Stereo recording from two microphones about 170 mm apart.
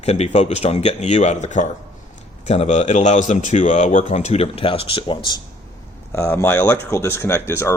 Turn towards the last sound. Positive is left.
turn(degrees=15)  # may be behind; listen again after turning